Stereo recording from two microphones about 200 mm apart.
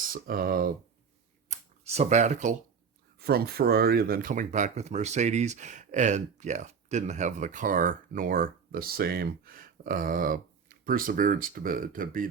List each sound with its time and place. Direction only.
0.0 s speech: 45° right (ahead or behind)
1.5 s speech: 35° right (ahead or behind)
3.2 s speech: 50° right (ahead or behind)